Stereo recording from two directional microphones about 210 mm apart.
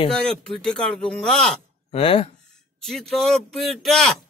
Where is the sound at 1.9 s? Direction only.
25° left (ahead or behind).